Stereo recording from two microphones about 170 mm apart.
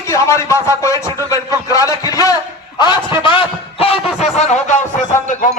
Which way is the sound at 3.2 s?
30° left (ahead or behind).